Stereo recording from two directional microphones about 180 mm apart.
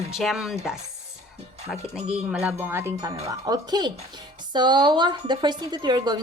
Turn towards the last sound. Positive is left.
turn(degrees=-25)  # may be behind; listen again after turning